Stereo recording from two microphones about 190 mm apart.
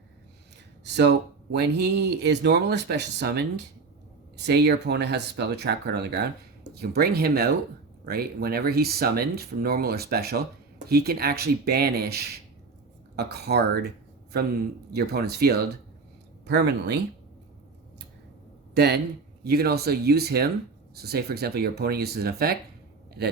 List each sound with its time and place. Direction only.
0.9 s speech: 65° right (ahead or behind)
14.9 s speech: 55° right (ahead or behind)
18.7 s speech: 55° right (ahead or behind)